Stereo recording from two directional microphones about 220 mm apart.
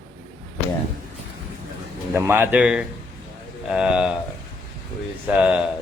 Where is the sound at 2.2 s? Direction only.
10° right (ahead or behind).